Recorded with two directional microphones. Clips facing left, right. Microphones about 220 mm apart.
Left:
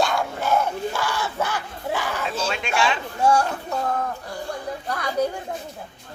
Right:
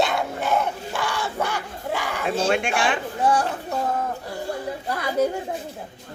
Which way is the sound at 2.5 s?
50° right (ahead or behind).